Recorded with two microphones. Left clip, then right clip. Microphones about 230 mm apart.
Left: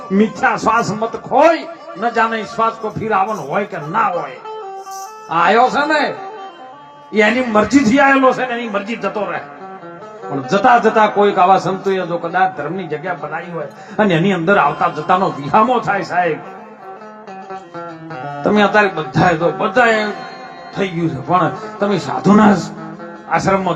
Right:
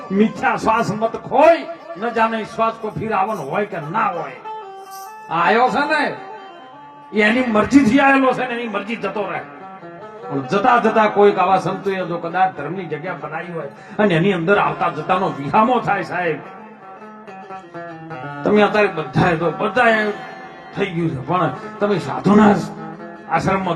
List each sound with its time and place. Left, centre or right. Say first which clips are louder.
0.3 s a man's voice: left 4 dB; centre
5.3 s a man's voice: left 3 dB; centre
7.1 s a man's voice: left 3 dB; left
17.7 s a man's voice: left 2 dB; centre
21.2 s a man's voice: left 5 dB; centre